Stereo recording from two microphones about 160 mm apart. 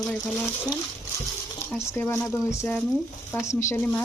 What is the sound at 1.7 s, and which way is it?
Speech, 15° left (ahead or behind).